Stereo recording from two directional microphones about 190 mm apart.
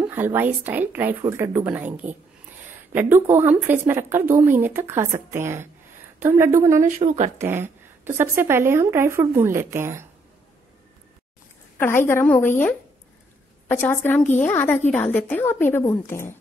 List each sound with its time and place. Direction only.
0.0 s a woman's voice: 10° right (ahead or behind)
6.9 s speech: 35° right (ahead or behind)
7.4 s a woman's voice: 10° right (ahead or behind)
12.1 s a woman's voice: 10° left (ahead or behind)
13.7 s a woman's voice: 10° left (ahead or behind)